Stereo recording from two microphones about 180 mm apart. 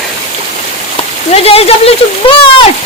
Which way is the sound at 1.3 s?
35° left (ahead or behind).